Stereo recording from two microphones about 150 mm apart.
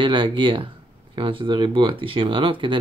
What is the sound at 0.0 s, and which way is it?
Speech, 35° right (ahead or behind).